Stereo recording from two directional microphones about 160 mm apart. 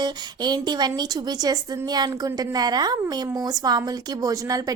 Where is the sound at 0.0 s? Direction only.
25° right (ahead or behind).